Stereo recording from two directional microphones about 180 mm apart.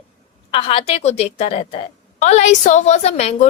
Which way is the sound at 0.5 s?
30° left (ahead or behind).